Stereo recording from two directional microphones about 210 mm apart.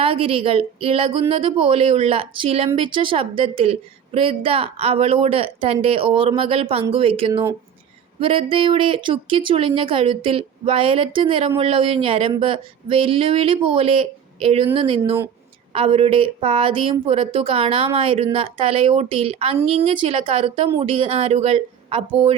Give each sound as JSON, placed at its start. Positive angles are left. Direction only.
{"t": 0.0, "sound": "speech", "side_deg": -25}